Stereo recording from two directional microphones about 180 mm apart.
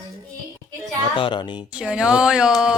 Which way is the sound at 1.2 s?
25° left (ahead or behind).